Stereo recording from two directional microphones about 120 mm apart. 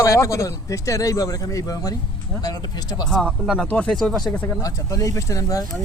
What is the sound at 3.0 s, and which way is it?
Speech, 5° left (ahead or behind).